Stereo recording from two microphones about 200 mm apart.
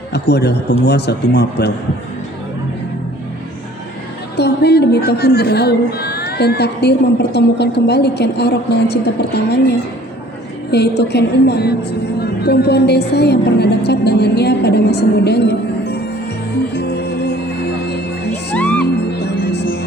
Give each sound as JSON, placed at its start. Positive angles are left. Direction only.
{"t": 0.1, "sound": "a woman's voice", "side_deg": 55}
{"t": 4.4, "sound": "a woman's voice", "side_deg": 55}
{"t": 10.7, "sound": "a woman's voice", "side_deg": 55}
{"t": 16.7, "sound": "music", "side_deg": 55}
{"t": 18.5, "sound": "music", "side_deg": 5}
{"t": 18.9, "sound": "music", "side_deg": 55}